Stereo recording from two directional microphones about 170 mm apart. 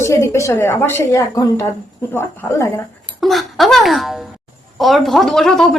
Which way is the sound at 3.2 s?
Centre (ahead or behind).